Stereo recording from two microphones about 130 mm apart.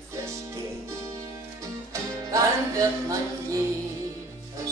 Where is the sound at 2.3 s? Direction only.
25° right (ahead or behind).